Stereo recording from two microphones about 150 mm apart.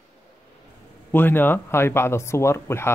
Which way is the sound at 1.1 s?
15° left (ahead or behind).